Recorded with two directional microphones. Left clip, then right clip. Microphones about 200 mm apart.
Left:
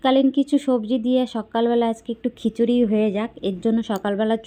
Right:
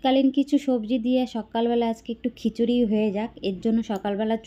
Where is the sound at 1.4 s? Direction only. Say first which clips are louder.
Left 4 dB; centre (ahead or behind).